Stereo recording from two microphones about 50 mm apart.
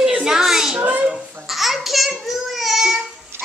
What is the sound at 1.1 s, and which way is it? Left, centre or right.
Babbling, centre.